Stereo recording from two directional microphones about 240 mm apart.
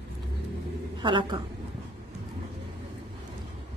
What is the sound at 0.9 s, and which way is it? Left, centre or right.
Speech, centre.